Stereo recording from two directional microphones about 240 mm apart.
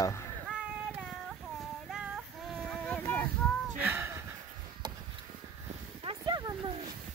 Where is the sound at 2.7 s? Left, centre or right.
Centre.